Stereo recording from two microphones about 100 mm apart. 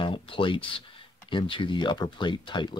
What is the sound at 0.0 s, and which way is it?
Speech, 60° left (ahead or behind).